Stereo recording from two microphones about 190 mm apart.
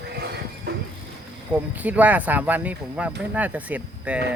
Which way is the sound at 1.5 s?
10° right (ahead or behind).